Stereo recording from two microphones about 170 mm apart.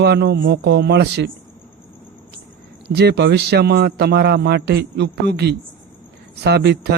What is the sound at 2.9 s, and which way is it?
Speech, 75° right (ahead or behind).